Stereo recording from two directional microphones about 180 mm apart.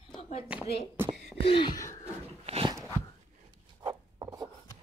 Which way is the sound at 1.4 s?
30° left (ahead or behind).